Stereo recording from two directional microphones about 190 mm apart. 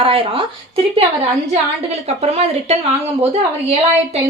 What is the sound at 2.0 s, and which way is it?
Speech, 35° right (ahead or behind).